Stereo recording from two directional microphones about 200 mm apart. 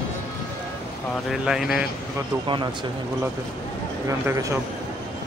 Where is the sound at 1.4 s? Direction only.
Centre (ahead or behind).